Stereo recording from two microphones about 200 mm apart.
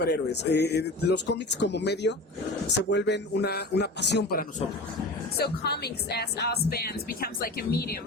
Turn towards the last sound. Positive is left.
turn(degrees=50)  # may be behind; listen again after turning